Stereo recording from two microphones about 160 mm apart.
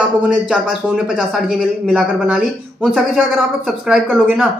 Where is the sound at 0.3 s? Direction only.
5° right (ahead or behind).